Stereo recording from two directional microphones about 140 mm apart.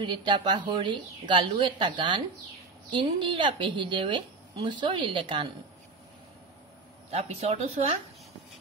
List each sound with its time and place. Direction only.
0.0 s a woman's voice: 35° right (ahead or behind)
7.1 s a woman's voice: 45° right (ahead or behind)